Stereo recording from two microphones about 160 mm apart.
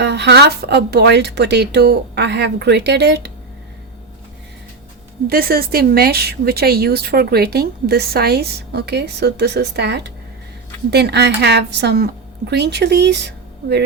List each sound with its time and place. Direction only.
0.0 s speech: 90° right
5.3 s speech: 70° right (ahead or behind); by 13.8 s 90° right